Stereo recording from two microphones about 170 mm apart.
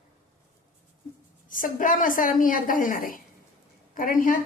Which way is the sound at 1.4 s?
50° left (ahead or behind).